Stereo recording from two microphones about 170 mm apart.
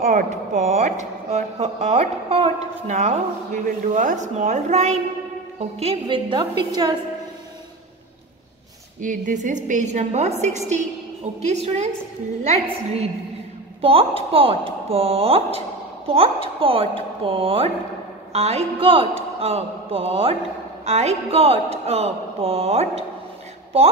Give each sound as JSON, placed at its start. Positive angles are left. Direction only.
{"t": 0.0, "sound": "a woman's voice", "side_deg": -50}
{"t": 9.0, "sound": "a woman's voice", "side_deg": -50}
{"t": 11.4, "sound": "speech", "side_deg": -40}